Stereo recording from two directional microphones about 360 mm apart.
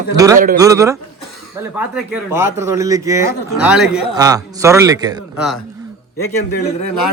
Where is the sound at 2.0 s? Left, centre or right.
Centre.